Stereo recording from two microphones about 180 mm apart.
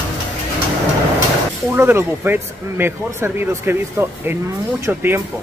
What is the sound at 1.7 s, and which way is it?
Speech, 15° right (ahead or behind).